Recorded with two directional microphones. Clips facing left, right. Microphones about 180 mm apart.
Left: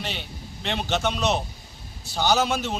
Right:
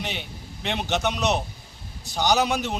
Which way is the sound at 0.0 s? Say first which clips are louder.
Right 1 dB; 15° right (ahead or behind).